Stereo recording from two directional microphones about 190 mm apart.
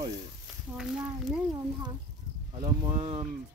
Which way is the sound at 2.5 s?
20° right (ahead or behind).